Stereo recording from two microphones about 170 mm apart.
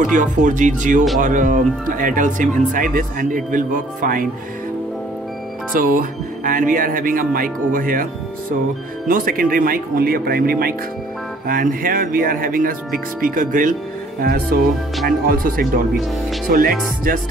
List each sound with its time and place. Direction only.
0.0 s speech: 50° right (ahead or behind)
5.7 s speech: 55° right (ahead or behind)